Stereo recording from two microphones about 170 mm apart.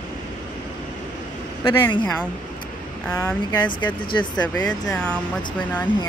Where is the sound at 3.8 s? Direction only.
30° left (ahead or behind).